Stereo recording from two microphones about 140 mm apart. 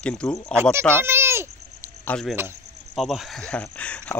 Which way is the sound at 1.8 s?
15° left (ahead or behind).